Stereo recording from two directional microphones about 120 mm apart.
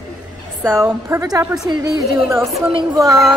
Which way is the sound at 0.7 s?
20° right (ahead or behind).